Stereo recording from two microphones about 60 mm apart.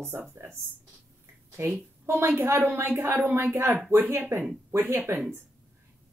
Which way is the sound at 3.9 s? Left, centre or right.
Right.